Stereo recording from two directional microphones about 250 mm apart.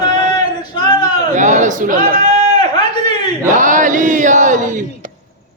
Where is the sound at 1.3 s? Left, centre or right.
Right.